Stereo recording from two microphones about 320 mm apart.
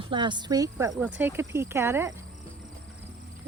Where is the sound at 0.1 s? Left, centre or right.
Centre.